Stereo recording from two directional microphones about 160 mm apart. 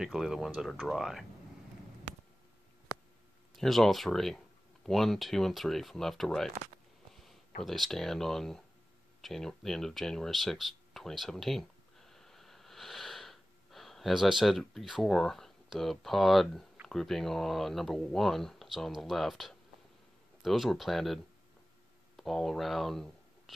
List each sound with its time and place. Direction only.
0.0 s speech: centre (ahead or behind)
3.5 s speech: centre (ahead or behind)
7.6 s speech: centre (ahead or behind)